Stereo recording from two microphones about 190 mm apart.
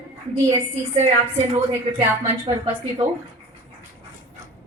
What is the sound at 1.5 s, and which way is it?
Speech, 30° right (ahead or behind).